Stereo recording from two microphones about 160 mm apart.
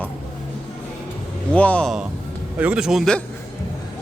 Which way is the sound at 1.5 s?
10° left (ahead or behind).